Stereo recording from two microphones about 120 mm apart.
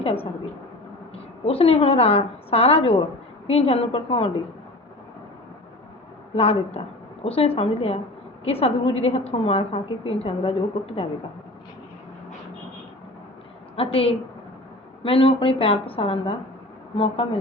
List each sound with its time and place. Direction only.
0.0 s a woman's voice: 55° left (ahead or behind)
6.3 s a woman's voice: 55° left (ahead or behind)
13.7 s a woman's voice: 50° left (ahead or behind)